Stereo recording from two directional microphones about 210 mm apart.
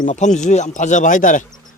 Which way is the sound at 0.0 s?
35° left (ahead or behind).